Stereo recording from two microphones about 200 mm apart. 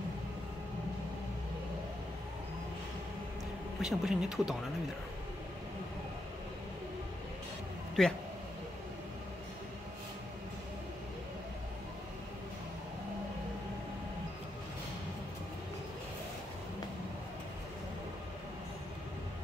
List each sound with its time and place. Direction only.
3.8 s speech: 5° right (ahead or behind)
8.0 s speech: 5° left (ahead or behind)